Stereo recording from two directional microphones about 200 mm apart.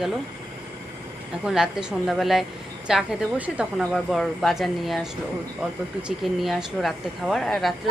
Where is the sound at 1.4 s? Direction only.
Centre (ahead or behind).